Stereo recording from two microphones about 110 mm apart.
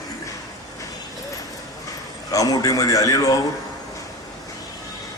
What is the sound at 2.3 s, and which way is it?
A man's voice, 35° left (ahead or behind).